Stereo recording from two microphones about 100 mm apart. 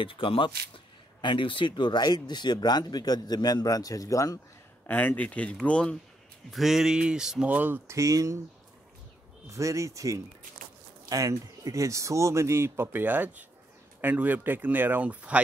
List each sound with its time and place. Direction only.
0.0 s speech: 60° left (ahead or behind); by 4.4 s 35° left (ahead or behind)
4.8 s speech: 15° left (ahead or behind)
6.5 s speech: 5° right (ahead or behind)
7.9 s speech: 35° right (ahead or behind)
9.5 s speech: 30° right (ahead or behind); by 15.4 s 15° right (ahead or behind)